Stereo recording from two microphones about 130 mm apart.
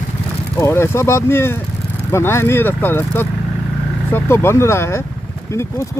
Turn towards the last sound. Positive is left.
turn(degrees=20)  # may be behind; listen again after turning